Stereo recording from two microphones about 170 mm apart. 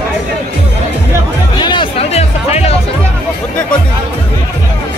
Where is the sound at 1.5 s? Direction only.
25° left (ahead or behind).